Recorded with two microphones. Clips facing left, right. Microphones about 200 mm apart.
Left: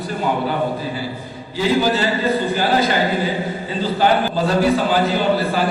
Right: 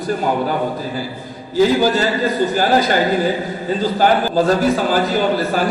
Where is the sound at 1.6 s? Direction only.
40° right (ahead or behind).